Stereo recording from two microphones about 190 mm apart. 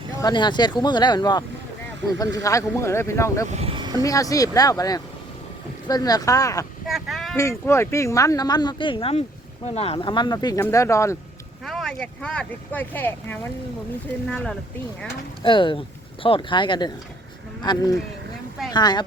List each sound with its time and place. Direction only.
0.2 s speech: 20° left (ahead or behind)
3.5 s a sound: 30° right (ahead or behind)
4.0 s speech: 20° left (ahead or behind)
6.8 s speech: centre (ahead or behind)
7.3 s speech: 15° left (ahead or behind)
11.6 s speech: centre (ahead or behind)
15.4 s speech: 25° left (ahead or behind)